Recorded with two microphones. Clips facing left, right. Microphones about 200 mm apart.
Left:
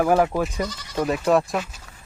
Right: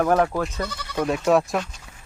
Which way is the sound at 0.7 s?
60° right (ahead or behind).